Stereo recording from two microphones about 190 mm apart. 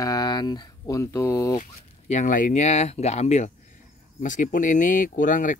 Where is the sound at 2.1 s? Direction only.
40° left (ahead or behind).